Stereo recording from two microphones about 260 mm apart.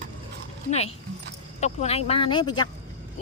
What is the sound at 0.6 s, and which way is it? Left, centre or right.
Speech, left.